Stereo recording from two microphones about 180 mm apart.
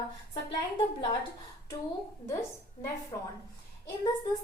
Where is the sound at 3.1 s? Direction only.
25° left (ahead or behind).